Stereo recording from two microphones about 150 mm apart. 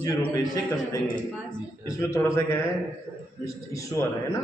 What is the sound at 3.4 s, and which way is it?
Speech, 20° left (ahead or behind).